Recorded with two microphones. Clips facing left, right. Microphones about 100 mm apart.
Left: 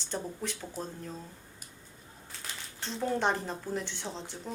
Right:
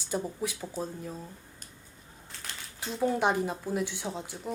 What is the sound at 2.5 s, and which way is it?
Speech, 5° right (ahead or behind).